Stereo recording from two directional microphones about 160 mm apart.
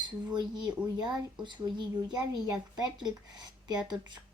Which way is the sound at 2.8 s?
25° right (ahead or behind).